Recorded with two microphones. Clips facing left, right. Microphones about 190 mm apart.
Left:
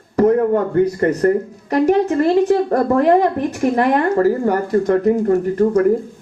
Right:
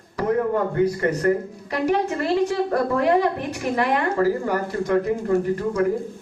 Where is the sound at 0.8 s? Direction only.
45° left (ahead or behind).